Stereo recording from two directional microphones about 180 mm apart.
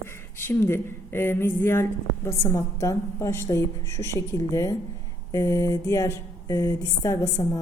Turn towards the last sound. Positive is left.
turn(degrees=15)  # may be behind; listen again after turning